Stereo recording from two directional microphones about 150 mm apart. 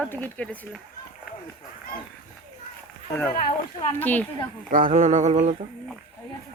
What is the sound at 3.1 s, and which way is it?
Speech, 15° left (ahead or behind).